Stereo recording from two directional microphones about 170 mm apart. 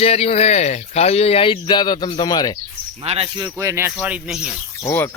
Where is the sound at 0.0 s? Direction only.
35° left (ahead or behind).